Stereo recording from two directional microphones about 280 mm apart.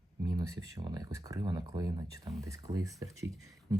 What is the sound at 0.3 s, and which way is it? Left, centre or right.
Speech, centre.